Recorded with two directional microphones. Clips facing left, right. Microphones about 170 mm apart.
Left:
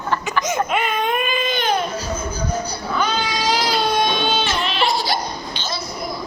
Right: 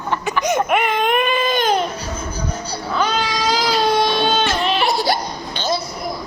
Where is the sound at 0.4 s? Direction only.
65° right (ahead or behind).